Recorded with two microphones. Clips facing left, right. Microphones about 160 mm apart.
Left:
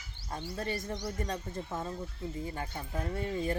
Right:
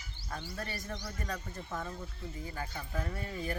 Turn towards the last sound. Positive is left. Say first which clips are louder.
# left 5 dB
turn(degrees=25)  # may be behind; listen again after turning